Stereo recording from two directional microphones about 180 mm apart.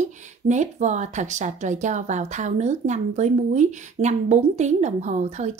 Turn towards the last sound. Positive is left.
turn(degrees=-40)  # may be behind; listen again after turning